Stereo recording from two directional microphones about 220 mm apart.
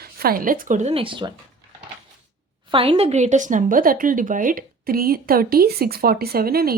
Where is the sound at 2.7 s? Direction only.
25° right (ahead or behind).